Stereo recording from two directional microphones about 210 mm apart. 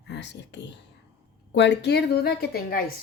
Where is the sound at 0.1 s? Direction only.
55° left (ahead or behind).